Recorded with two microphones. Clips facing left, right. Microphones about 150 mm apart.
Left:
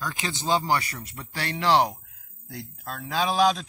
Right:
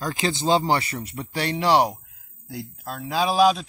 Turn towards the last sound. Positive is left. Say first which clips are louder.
# right 3 dB
turn(degrees=-5)  # may be behind; listen again after turning